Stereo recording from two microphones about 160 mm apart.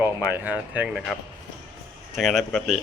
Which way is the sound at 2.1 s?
Centre (ahead or behind).